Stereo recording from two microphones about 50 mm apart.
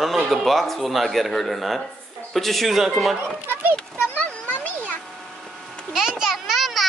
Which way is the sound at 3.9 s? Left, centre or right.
Left.